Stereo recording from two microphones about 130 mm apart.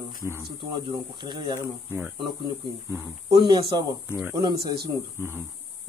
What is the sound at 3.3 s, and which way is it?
Speech, 35° right (ahead or behind).